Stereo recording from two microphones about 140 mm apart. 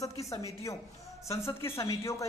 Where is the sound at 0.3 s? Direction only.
20° left (ahead or behind).